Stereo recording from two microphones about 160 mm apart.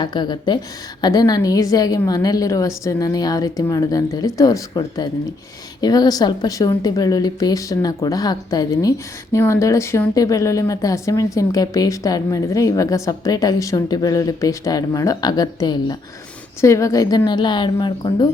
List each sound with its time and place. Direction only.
0.0 s a woman's voice: 30° left (ahead or behind)
5.8 s a woman's voice: 25° left (ahead or behind)